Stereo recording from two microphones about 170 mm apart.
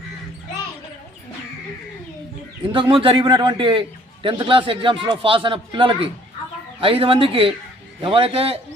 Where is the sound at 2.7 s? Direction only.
30° right (ahead or behind).